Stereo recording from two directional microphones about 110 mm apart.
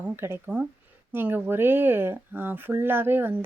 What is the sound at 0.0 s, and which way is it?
Speech, 20° right (ahead or behind).